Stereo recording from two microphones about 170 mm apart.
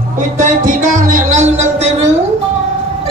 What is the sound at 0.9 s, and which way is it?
Music, 45° right (ahead or behind).